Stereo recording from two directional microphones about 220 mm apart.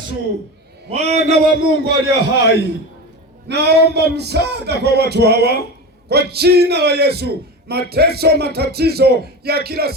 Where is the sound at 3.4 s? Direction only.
50° right (ahead or behind).